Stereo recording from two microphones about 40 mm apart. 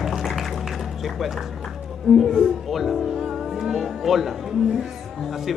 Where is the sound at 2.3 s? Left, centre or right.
Centre.